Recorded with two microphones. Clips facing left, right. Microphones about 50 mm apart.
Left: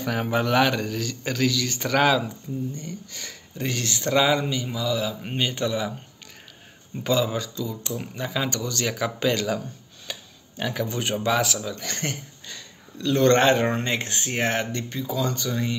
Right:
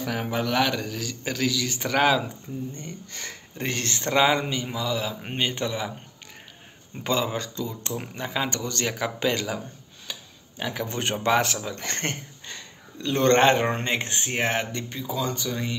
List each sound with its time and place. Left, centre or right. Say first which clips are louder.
0.0 s a man's voice: left 3 dB; centre
2.2 s speech: left 3 dB; right
4.1 s a man's voice: even; right
7.0 s a man's voice: left 2 dB; right
7.4 s speech: left 1 dB; right
8.2 s a man's voice: left 1 dB; centre
10.6 s speech: left 3 dB; centre
10.9 s a man's voice: right 3 dB; right; by 15.8 s centre